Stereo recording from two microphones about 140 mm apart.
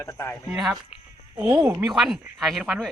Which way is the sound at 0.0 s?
20° left (ahead or behind).